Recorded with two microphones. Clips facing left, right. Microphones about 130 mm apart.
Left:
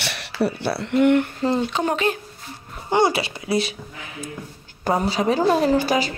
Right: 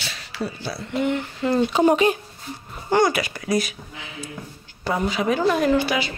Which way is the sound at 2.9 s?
25° left (ahead or behind).